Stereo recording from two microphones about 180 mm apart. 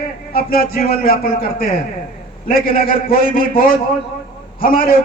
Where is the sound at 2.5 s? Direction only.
50° left (ahead or behind).